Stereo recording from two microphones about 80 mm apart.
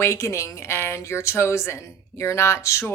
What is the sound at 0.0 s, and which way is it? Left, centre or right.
Speech, left.